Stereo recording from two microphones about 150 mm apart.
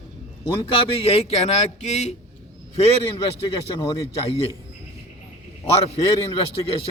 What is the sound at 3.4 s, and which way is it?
Speech, 30° left (ahead or behind).